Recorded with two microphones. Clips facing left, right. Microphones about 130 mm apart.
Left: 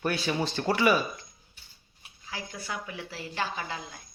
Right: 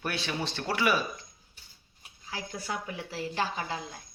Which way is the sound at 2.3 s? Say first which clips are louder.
Right 1 dB; 40° right (ahead or behind).